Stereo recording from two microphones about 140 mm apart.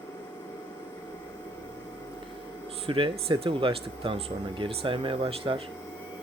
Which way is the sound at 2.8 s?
40° right (ahead or behind).